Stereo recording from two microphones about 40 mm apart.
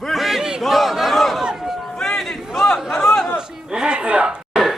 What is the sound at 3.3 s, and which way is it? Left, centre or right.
Chatter, centre.